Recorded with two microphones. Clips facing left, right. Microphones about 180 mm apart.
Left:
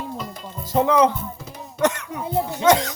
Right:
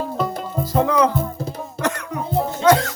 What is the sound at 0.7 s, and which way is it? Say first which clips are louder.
Speech: left 1 dB; 20° left (ahead or behind).